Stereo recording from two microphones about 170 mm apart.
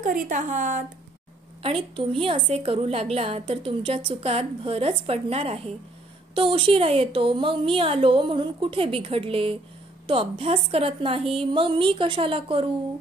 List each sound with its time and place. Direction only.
0.0 s speech: 50° right (ahead or behind)
1.6 s a woman's voice: 30° right (ahead or behind)